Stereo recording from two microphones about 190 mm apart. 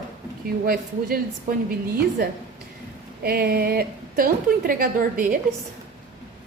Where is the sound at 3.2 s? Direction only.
55° right (ahead or behind).